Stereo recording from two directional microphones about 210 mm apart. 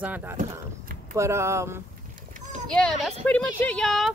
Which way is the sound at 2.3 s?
35° right (ahead or behind).